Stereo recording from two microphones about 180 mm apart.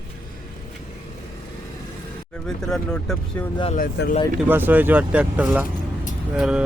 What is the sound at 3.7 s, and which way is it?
Speech, 50° left (ahead or behind).